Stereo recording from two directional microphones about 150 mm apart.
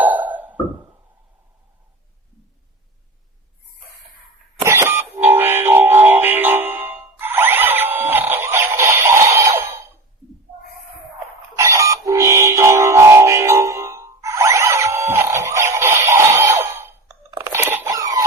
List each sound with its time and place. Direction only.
0.0 s music: 10° right (ahead or behind)
4.6 s train: 20° right (ahead or behind)
11.5 s music: 20° right (ahead or behind)
17.3 s a sound: 20° right (ahead or behind)